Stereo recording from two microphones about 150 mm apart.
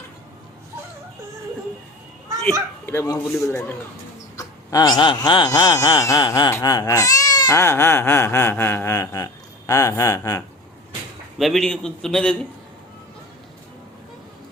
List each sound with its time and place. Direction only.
2.8 s speech: 20° left (ahead or behind)
11.3 s a man's voice: centre (ahead or behind)